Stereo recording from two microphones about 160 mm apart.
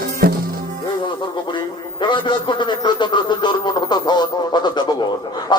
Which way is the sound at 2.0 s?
30° left (ahead or behind).